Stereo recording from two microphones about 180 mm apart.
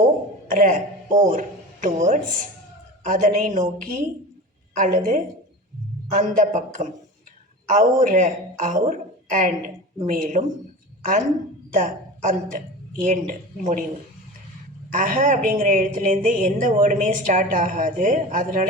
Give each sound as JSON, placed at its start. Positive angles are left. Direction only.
{"t": 0.4, "sound": "a man's voice", "side_deg": -45}
{"t": 11.7, "sound": "a woman's voice", "side_deg": -45}
{"t": 14.9, "sound": "speech", "side_deg": -45}